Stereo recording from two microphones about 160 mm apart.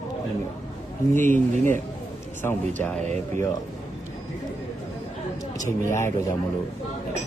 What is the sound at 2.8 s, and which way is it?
Speech, 10° left (ahead or behind).